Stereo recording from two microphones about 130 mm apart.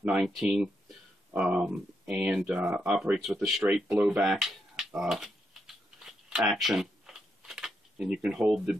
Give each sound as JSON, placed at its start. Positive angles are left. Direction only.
{"t": 0.0, "sound": "speech", "side_deg": -5}
{"t": 3.8, "sound": "speech", "side_deg": -25}
{"t": 4.2, "sound": "typing", "side_deg": 0}